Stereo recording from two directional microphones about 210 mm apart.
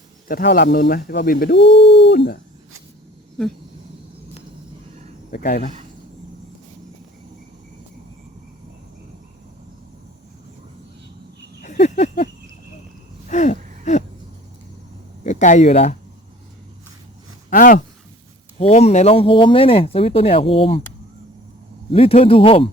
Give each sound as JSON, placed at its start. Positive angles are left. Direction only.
{"t": 0.3, "sound": "speech", "side_deg": 45}
{"t": 1.5, "sound": "speech", "side_deg": 60}
{"t": 5.3, "sound": "speech", "side_deg": 45}
{"t": 11.6, "sound": "a sound", "side_deg": 35}
{"t": 13.2, "sound": "a sound", "side_deg": 35}
{"t": 15.2, "sound": "speech", "side_deg": 35}
{"t": 17.5, "sound": "speech", "side_deg": 40}
{"t": 21.9, "sound": "speech", "side_deg": 25}